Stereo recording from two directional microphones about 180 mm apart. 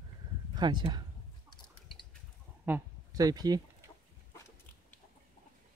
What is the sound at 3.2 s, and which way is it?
Speech, 20° right (ahead or behind).